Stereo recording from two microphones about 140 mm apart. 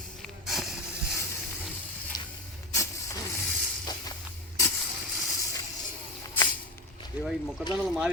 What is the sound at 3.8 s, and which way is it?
Music, 30° left (ahead or behind).